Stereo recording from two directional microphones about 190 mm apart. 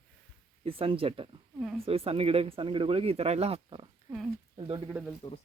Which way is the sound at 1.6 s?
5° right (ahead or behind).